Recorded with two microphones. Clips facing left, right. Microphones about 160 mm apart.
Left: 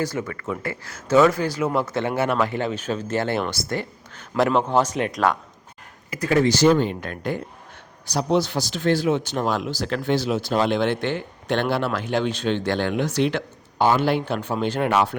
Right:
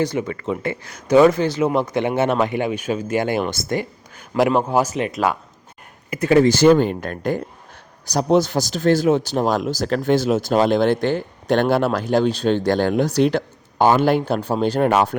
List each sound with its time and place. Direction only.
0.0 s speech: 20° right (ahead or behind)
6.1 s speech: 25° right (ahead or behind)
6.4 s speech: 55° right (ahead or behind)